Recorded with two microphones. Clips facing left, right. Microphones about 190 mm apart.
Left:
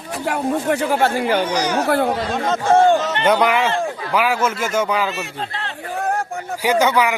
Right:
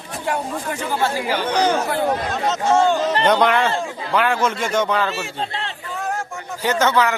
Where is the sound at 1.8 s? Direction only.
65° left (ahead or behind).